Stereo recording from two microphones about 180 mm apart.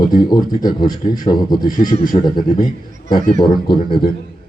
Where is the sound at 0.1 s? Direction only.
25° left (ahead or behind).